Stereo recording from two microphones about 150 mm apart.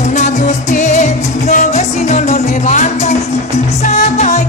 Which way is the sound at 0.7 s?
50° left (ahead or behind).